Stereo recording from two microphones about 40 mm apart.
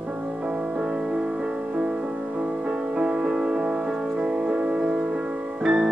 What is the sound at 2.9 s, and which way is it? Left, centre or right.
Music, centre.